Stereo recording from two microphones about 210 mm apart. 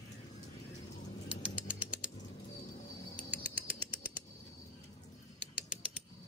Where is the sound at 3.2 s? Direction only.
5° right (ahead or behind).